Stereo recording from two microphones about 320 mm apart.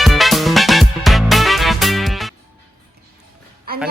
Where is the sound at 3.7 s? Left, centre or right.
Right.